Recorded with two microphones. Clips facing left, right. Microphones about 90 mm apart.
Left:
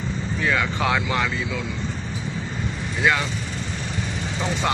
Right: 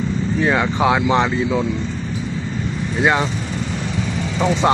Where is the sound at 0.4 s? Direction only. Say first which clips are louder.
Right 5 dB; 25° right (ahead or behind).